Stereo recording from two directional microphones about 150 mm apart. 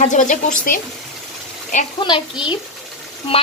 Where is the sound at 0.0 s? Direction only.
55° left (ahead or behind).